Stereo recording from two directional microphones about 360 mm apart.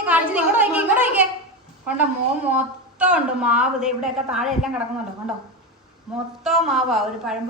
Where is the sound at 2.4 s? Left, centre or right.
Centre.